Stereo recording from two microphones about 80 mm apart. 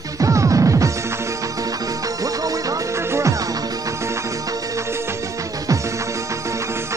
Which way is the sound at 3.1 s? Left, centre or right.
Right.